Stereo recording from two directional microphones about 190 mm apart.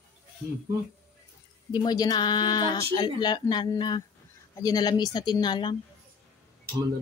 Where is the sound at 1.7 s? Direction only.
20° left (ahead or behind).